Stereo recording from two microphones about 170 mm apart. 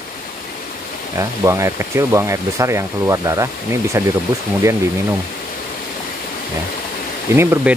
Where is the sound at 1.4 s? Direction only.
15° right (ahead or behind).